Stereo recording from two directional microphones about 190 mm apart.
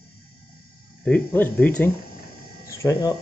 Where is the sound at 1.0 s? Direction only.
10° left (ahead or behind).